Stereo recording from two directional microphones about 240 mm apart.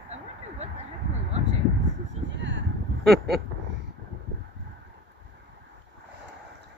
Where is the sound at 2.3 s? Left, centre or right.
Right.